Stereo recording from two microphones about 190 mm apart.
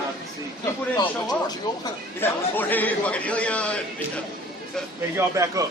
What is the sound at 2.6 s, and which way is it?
A man's voice, 10° left (ahead or behind).